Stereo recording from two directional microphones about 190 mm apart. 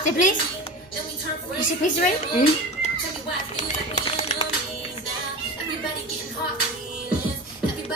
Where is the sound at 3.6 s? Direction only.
30° left (ahead or behind).